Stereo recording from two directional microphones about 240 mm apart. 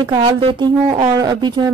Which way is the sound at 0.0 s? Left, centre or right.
Centre.